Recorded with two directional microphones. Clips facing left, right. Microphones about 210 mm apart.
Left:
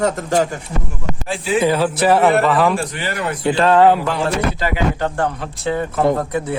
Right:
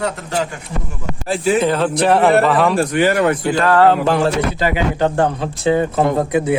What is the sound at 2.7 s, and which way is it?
Speech, 50° right (ahead or behind).